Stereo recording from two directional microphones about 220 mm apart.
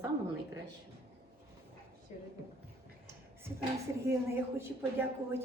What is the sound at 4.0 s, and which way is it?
Speech, 10° right (ahead or behind).